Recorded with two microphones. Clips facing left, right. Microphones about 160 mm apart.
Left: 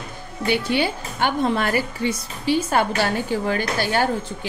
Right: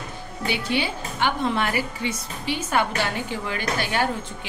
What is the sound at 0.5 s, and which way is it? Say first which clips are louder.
A woman's voice: left 5 dB; 45° left (ahead or behind).